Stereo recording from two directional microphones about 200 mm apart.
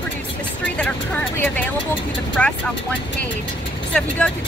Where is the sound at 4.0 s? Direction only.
5° left (ahead or behind).